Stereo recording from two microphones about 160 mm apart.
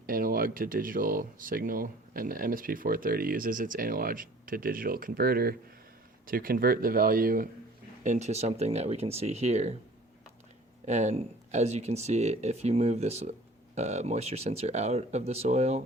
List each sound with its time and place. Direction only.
0.0 s speech: 65° right (ahead or behind)
8.0 s speech: 50° right (ahead or behind)
10.8 s speech: 45° right (ahead or behind)